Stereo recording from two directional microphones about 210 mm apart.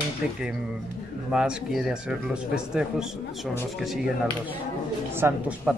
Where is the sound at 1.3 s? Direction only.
5° right (ahead or behind).